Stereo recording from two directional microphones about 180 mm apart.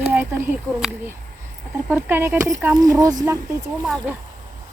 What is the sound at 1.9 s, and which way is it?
Speech, 10° right (ahead or behind).